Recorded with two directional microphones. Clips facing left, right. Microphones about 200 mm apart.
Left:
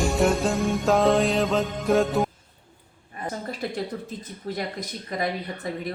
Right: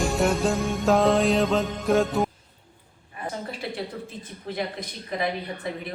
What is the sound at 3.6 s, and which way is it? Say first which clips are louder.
Speech: left 2 dB; 45° left (ahead or behind).